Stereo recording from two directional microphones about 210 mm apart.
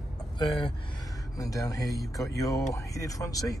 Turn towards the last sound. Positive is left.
turn(degrees=15)  # may be behind; listen again after turning